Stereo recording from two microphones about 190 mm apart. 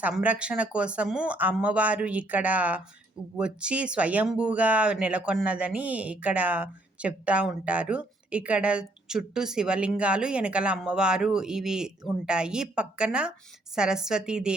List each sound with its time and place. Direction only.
0.0 s speech: 10° right (ahead or behind)